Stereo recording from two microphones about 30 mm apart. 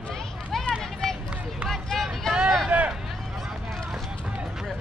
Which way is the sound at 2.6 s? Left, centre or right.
Right.